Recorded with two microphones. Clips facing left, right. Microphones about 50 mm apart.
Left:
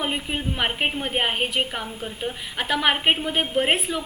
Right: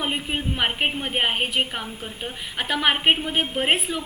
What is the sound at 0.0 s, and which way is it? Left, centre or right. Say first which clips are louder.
A woman's voice: even; centre.